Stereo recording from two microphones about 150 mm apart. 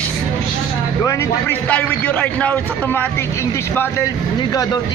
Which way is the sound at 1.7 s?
10° left (ahead or behind).